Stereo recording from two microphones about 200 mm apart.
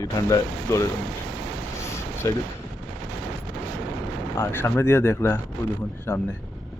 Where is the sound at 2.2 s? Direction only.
15° left (ahead or behind).